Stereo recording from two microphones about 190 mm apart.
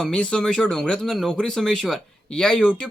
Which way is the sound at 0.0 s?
5° left (ahead or behind).